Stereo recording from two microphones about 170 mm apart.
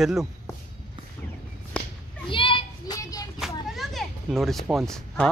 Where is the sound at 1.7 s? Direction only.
5° left (ahead or behind).